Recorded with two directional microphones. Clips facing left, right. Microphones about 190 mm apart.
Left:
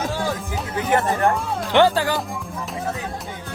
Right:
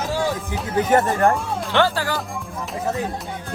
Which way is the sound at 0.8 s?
45° right (ahead or behind).